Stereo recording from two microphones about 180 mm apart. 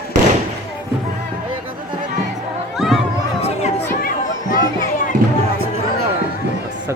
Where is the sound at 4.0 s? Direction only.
55° left (ahead or behind).